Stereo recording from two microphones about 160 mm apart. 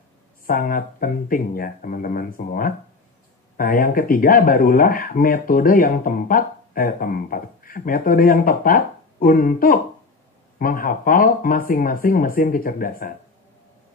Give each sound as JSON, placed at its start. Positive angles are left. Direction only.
{"t": 0.5, "sound": "speech", "side_deg": 65}